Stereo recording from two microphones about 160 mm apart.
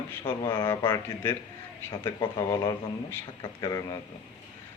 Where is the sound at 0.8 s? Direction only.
15° left (ahead or behind).